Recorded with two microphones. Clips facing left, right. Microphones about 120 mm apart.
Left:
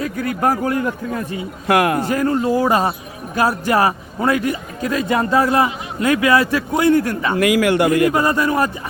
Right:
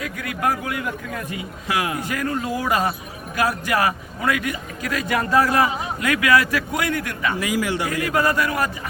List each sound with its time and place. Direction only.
0.0 s speech: 35° left (ahead or behind)
1.6 s speech: 60° left (ahead or behind)
2.0 s a man's voice: 30° left (ahead or behind)
7.3 s speech: 70° left (ahead or behind)
8.1 s a man's voice: 25° left (ahead or behind)